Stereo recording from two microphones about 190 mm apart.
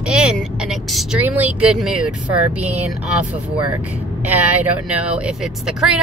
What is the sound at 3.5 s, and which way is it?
Speech, 25° right (ahead or behind).